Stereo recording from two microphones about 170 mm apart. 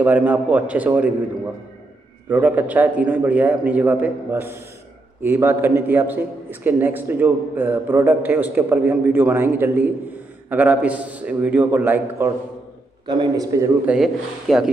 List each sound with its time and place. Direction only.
0.0 s a man's voice: 10° right (ahead or behind)
2.2 s a man's voice: 10° right (ahead or behind)
13.0 s a man's voice: 25° right (ahead or behind)
13.8 s speech: centre (ahead or behind)